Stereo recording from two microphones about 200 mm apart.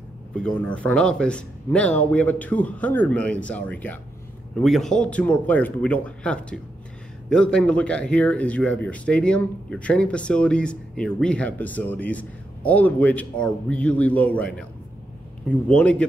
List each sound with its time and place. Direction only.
0.4 s a man's voice: 5° left (ahead or behind)